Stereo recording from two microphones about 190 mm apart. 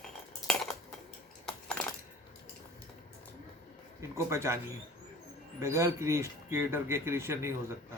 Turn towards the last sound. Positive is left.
turn(degrees=-15)  # may be behind; listen again after turning